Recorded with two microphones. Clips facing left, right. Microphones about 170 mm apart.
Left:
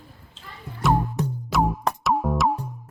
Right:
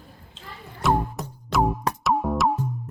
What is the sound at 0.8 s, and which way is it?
Music, centre (ahead or behind).